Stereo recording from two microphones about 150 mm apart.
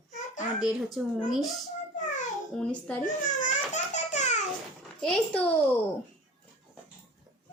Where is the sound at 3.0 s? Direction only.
60° left (ahead or behind).